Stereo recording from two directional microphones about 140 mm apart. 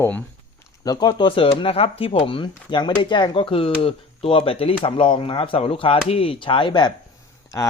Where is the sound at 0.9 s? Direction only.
30° left (ahead or behind).